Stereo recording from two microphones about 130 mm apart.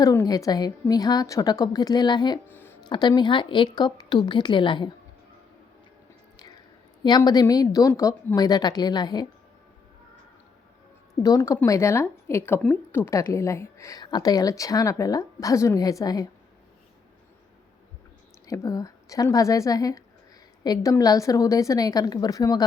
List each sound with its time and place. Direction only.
0.0 s a woman's voice: 25° left (ahead or behind)
2.5 s a sound: 15° left (ahead or behind)
2.9 s a woman's voice: 35° left (ahead or behind)
7.3 s a woman's voice: 30° left (ahead or behind)
11.1 s a woman's voice: 25° left (ahead or behind)
18.4 s a woman's voice: 25° left (ahead or behind)